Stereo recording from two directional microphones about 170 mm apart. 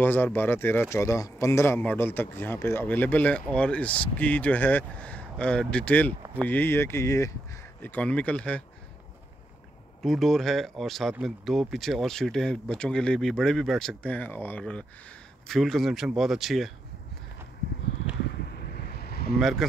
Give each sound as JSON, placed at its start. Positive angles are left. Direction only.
{"t": 0.0, "sound": "a man's voice", "side_deg": 10}
{"t": 10.0, "sound": "speech", "side_deg": 0}
{"t": 18.5, "sound": "vehicle", "side_deg": 65}
{"t": 19.3, "sound": "speech", "side_deg": 0}